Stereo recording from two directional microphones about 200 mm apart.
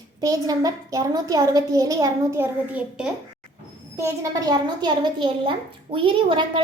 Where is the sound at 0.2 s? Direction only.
20° right (ahead or behind).